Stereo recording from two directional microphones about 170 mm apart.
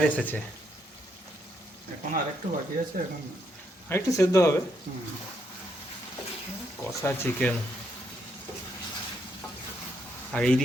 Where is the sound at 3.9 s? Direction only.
15° left (ahead or behind).